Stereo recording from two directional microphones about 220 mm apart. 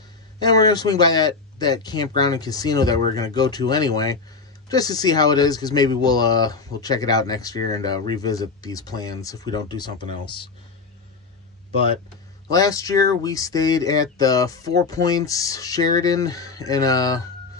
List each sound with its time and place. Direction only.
0.4 s speech: 15° left (ahead or behind)
12.4 s speech: 15° left (ahead or behind)